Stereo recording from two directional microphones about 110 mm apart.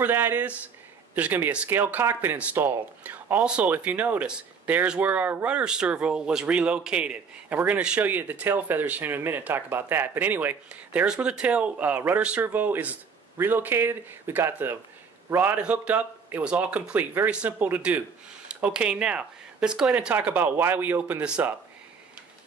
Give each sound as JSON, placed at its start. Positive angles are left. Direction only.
{"t": 0.0, "sound": "a man's voice", "side_deg": -15}
{"t": 15.5, "sound": "speech", "side_deg": -10}